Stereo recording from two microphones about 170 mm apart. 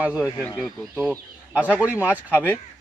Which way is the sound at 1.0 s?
10° right (ahead or behind).